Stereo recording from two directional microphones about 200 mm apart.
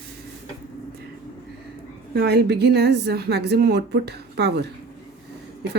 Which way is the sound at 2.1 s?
55° right (ahead or behind).